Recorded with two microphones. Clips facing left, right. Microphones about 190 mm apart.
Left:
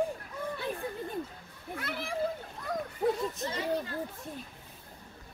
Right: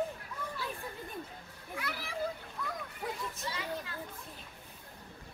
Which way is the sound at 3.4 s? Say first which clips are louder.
Left 6 dB; 40° left (ahead or behind).